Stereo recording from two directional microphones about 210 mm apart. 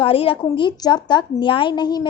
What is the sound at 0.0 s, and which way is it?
A woman's voice, 25° left (ahead or behind).